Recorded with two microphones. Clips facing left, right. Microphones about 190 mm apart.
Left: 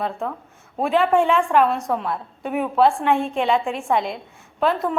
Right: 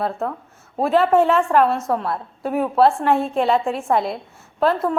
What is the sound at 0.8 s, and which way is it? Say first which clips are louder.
A woman's voice: right 2 dB; centre (ahead or behind).